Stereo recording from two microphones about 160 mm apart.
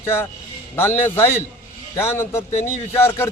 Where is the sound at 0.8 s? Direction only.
15° left (ahead or behind).